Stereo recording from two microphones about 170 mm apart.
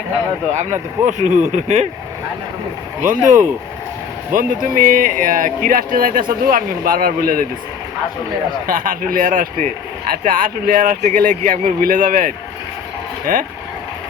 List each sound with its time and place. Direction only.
0.5 s speech: 45° right (ahead or behind)
3.0 s speech: 50° right (ahead or behind)
8.6 s speech: 55° right (ahead or behind)